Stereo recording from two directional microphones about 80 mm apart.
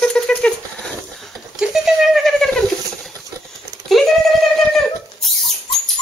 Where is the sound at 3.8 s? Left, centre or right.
Centre.